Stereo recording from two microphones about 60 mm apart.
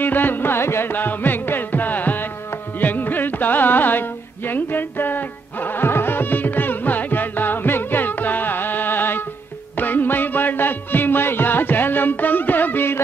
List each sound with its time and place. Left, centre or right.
0.0 s music: left